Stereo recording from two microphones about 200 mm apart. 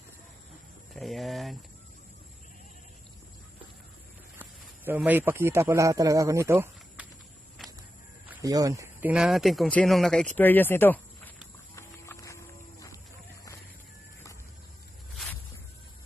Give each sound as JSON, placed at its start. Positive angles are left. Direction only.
{"t": 0.9, "sound": "speech", "side_deg": 0}
{"t": 4.4, "sound": "speech", "side_deg": -10}
{"t": 8.3, "sound": "speech", "side_deg": -15}
{"t": 11.7, "sound": "horse", "side_deg": 15}